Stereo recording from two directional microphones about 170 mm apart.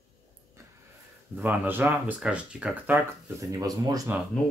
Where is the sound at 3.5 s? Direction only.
20° right (ahead or behind).